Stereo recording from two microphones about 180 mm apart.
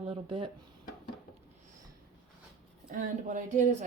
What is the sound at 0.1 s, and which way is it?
Speech, 30° right (ahead or behind).